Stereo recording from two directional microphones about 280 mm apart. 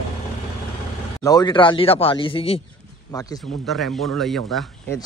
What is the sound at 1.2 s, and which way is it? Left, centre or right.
A man's voice, centre.